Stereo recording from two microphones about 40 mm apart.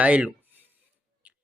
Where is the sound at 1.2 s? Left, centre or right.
Right.